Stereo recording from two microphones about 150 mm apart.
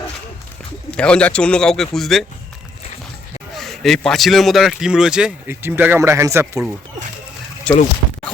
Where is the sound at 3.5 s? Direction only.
Centre (ahead or behind); by 6.6 s 20° right (ahead or behind).